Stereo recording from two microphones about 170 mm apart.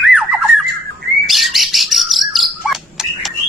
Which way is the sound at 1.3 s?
Centre (ahead or behind).